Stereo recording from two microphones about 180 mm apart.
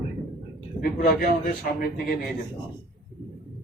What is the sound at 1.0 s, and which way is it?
Speech, 55° left (ahead or behind).